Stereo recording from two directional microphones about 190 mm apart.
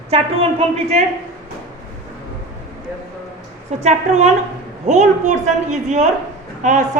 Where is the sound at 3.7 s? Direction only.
35° right (ahead or behind).